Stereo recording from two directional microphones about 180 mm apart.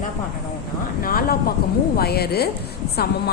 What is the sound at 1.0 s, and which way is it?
A woman's voice, 55° left (ahead or behind).